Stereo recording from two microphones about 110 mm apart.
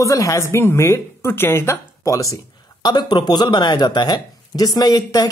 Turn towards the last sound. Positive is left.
turn(degrees=35)  # may be behind; listen again after turning